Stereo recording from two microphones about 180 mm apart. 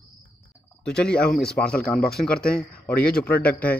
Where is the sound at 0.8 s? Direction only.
5° left (ahead or behind).